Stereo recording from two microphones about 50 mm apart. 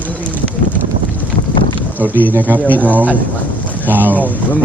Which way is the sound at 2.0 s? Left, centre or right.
Right.